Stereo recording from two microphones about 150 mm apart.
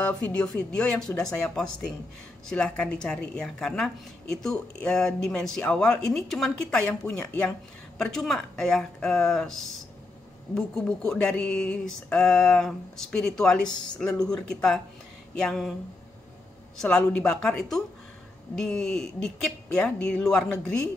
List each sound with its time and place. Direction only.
0.0 s a woman's voice: 10° left (ahead or behind)
16.8 s a woman's voice: 5° left (ahead or behind)